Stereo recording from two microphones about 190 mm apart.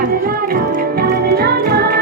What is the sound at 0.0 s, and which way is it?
Music, 50° right (ahead or behind).